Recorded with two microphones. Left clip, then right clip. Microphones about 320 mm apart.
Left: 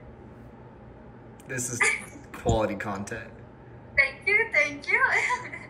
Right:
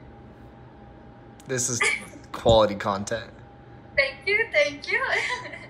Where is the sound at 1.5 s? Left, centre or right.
Centre.